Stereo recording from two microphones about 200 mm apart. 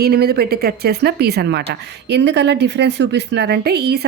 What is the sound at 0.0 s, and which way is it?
Speech, 50° right (ahead or behind).